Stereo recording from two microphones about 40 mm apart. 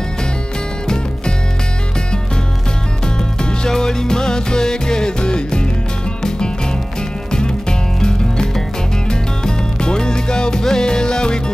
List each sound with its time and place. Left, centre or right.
3.6 s music: centre
7.2 s music: centre